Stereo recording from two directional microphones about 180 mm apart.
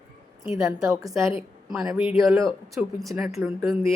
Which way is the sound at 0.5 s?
20° right (ahead or behind).